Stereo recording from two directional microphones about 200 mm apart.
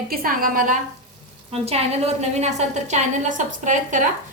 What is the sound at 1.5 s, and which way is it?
A woman's voice, 30° right (ahead or behind).